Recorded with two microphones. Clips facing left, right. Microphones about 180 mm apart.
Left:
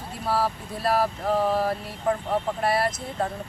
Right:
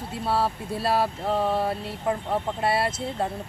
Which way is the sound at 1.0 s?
Centre (ahead or behind).